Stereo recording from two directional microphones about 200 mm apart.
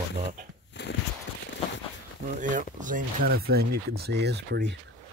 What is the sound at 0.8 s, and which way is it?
Walk, 60° left (ahead or behind).